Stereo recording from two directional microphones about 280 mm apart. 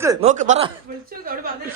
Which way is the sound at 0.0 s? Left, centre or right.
Centre.